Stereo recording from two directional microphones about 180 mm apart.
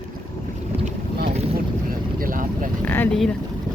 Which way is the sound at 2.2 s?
50° right (ahead or behind).